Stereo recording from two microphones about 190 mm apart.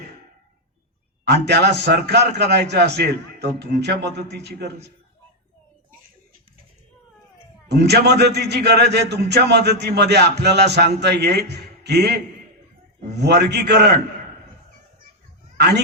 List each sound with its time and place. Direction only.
1.2 s a man's voice: 60° right (ahead or behind)
7.7 s a man's voice: 60° right (ahead or behind)
15.5 s speech: 60° right (ahead or behind)